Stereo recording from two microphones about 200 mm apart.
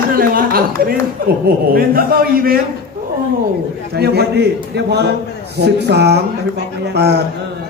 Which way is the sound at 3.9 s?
55° right (ahead or behind).